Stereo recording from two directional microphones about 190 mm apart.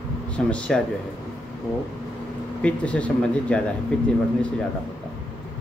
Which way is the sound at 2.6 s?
5° left (ahead or behind).